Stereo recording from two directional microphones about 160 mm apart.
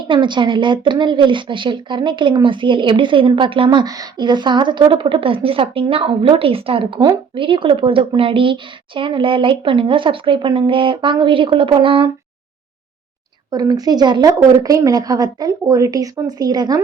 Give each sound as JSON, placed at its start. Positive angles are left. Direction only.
{"t": 0.0, "sound": "speech", "side_deg": -30}
{"t": 13.5, "sound": "a woman's voice", "side_deg": -25}